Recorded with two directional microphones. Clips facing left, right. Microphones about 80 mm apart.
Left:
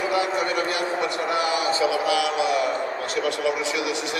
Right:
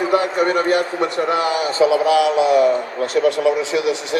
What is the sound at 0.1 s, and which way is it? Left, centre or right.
Speech, right.